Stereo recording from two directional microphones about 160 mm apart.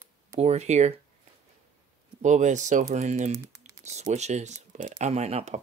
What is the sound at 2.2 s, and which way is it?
Speech, 50° right (ahead or behind).